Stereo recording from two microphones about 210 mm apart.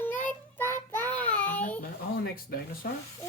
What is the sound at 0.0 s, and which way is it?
Child singing, 10° left (ahead or behind).